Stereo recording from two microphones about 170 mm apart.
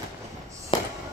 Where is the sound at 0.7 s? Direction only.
30° left (ahead or behind).